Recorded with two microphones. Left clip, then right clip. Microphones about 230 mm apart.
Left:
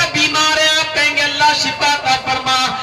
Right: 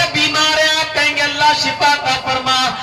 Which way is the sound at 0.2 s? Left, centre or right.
Left.